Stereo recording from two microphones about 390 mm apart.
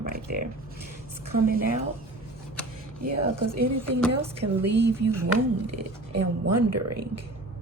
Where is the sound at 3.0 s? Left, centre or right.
Right.